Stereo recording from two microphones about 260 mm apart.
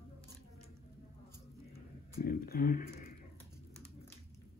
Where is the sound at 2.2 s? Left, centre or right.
Left.